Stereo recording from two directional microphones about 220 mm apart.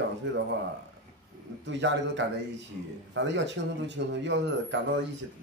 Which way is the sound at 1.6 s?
55° right (ahead or behind).